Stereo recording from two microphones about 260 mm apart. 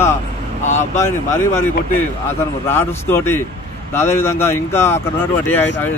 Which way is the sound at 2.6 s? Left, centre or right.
Centre.